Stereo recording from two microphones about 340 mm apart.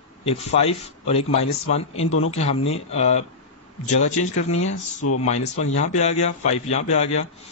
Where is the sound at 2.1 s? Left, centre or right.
Left.